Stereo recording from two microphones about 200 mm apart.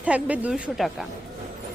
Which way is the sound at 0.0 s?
5° right (ahead or behind).